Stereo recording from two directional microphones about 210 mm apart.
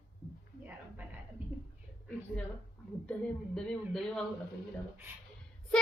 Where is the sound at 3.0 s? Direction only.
5° left (ahead or behind).